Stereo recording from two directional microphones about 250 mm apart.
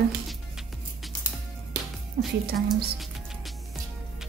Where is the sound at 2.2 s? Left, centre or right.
Right.